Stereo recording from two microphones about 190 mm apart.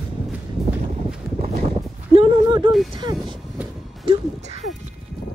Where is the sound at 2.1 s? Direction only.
25° right (ahead or behind).